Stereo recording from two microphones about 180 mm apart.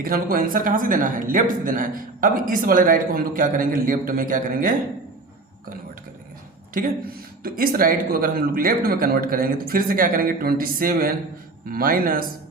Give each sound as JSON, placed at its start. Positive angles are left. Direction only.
{"t": 0.0, "sound": "speech", "side_deg": -55}
{"t": 6.7, "sound": "speech", "side_deg": -50}